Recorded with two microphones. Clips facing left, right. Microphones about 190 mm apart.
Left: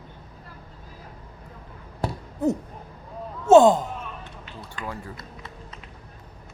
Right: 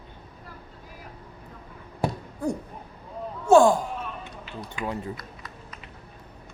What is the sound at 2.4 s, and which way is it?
Speech, 20° left (ahead or behind).